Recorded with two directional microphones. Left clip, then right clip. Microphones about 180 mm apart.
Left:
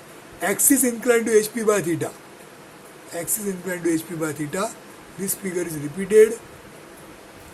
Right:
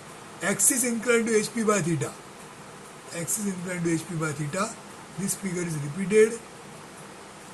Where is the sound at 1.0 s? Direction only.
45° left (ahead or behind).